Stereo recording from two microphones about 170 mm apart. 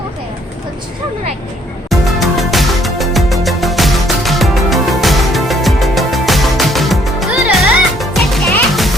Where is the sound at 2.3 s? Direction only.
Centre (ahead or behind).